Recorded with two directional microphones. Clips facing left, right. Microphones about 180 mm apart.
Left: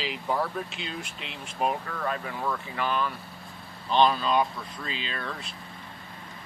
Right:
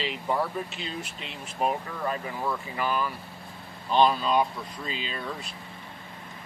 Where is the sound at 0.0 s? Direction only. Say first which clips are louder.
Right 1 dB; centre (ahead or behind).